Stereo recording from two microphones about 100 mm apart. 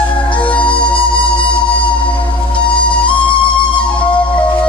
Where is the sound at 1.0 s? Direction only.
55° left (ahead or behind).